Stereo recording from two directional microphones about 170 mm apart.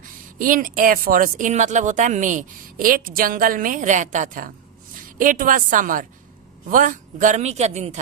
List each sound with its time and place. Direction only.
0.3 s speech: 50° right (ahead or behind)